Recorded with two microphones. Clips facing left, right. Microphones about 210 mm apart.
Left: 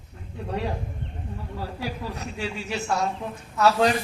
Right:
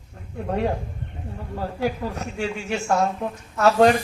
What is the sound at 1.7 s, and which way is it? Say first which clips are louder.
Speech: right 9 dB; 45° right (ahead or behind).